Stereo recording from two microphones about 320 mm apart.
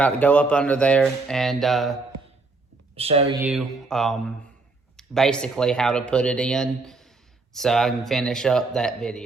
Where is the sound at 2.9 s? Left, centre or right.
Centre.